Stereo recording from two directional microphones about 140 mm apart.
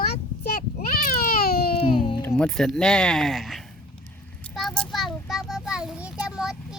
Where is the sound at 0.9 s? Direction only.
90° left.